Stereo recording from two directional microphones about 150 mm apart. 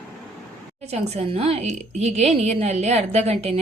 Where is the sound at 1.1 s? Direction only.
40° right (ahead or behind).